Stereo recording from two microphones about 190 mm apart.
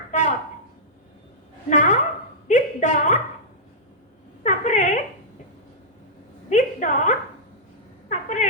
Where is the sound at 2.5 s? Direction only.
40° left (ahead or behind).